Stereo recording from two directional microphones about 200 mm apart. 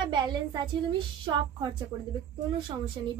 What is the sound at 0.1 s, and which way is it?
Speech, 20° right (ahead or behind).